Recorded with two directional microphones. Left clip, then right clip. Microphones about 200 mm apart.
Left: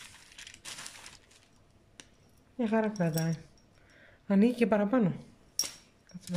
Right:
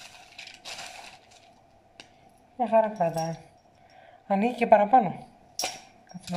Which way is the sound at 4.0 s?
45° left (ahead or behind).